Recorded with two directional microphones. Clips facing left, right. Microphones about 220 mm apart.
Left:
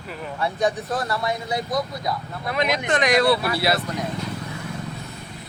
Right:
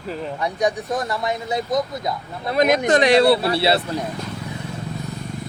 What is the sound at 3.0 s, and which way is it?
Speech, 30° right (ahead or behind).